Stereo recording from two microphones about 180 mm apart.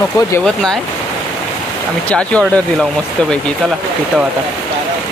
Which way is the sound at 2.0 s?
5° left (ahead or behind).